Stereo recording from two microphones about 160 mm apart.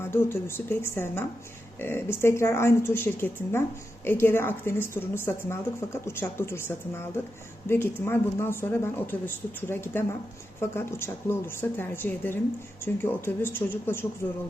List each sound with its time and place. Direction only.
0.0 s a woman's voice: 15° left (ahead or behind)